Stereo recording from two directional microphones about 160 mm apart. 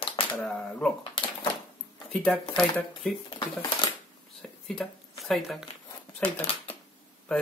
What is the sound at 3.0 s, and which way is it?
Speech, 5° left (ahead or behind).